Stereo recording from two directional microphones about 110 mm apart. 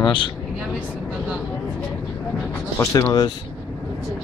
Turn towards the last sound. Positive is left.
turn(degrees=35)  # may be behind; listen again after turning